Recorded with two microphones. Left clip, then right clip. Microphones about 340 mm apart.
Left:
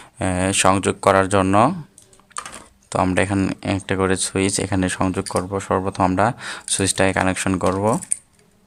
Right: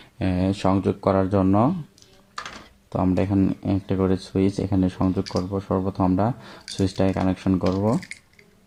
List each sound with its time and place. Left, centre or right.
0.0 s a sound: centre
0.7 s speech: left
2.9 s speech: left